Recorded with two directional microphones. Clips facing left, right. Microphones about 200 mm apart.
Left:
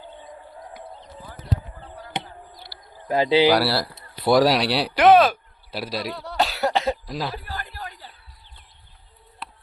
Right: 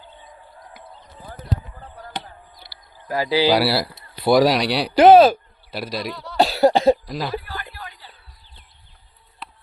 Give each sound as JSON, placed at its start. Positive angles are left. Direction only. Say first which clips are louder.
{"t": 2.1, "sound": "a sound", "louder": "left 2 dB", "side_deg": 20}
{"t": 3.1, "sound": "speech", "louder": "left 2 dB", "side_deg": 25}
{"t": 3.6, "sound": "speech", "louder": "right 3 dB", "side_deg": -5}
{"t": 4.9, "sound": "speech", "louder": "right 5 dB", "side_deg": -30}
{"t": 5.7, "sound": "speech", "louder": "right 1 dB", "side_deg": 5}
{"t": 6.3, "sound": "cough", "louder": "right 7 dB", "side_deg": -30}
{"t": 7.1, "sound": "speech", "louder": "right 1 dB", "side_deg": 0}
{"t": 7.4, "sound": "a sound", "louder": "even", "side_deg": 40}
{"t": 9.4, "sound": "music", "louder": "even", "side_deg": 0}